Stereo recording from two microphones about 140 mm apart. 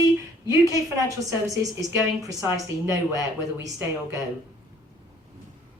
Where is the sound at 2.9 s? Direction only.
25° right (ahead or behind).